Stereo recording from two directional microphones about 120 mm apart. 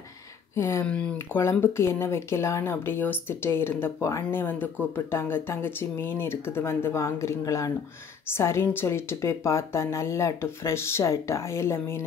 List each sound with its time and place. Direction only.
0.6 s speech: 25° left (ahead or behind)
0.8 s speech: 10° left (ahead or behind)
1.1 s speech: 20° left (ahead or behind)